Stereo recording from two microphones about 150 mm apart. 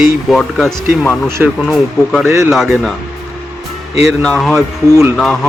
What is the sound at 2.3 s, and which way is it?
Speech, 20° right (ahead or behind).